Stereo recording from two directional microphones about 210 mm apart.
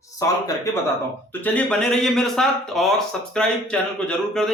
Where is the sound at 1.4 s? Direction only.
5° left (ahead or behind).